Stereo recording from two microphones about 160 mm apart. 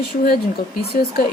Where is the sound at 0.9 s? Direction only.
80° left.